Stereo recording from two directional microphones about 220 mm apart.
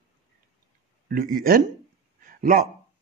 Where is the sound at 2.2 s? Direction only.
40° right (ahead or behind).